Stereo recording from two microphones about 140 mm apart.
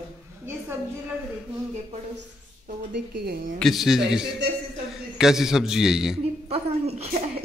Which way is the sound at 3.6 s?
Centre (ahead or behind).